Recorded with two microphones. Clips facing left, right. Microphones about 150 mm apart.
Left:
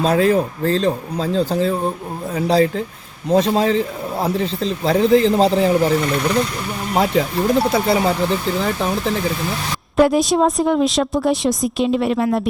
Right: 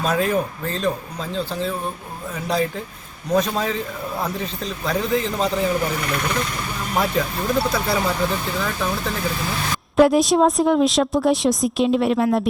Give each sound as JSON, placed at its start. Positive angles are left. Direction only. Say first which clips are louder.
{"t": 0.0, "sound": "a man's voice", "louder": "left 5 dB", "side_deg": 30}
{"t": 6.9, "sound": "speech", "louder": "left 5 dB", "side_deg": 25}
{"t": 10.0, "sound": "a woman's voice", "louder": "even", "side_deg": 0}